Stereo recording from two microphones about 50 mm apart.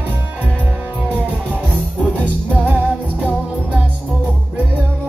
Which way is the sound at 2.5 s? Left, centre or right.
Right.